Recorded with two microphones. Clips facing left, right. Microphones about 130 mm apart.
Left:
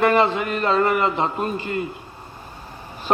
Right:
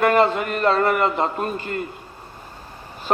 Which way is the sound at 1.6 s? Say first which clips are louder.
Left 2 dB; 45° right (ahead or behind).